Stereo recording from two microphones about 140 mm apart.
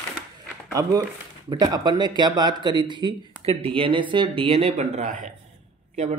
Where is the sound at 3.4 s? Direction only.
45° right (ahead or behind).